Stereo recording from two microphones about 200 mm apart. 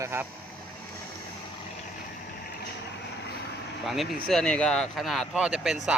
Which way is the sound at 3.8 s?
Centre (ahead or behind).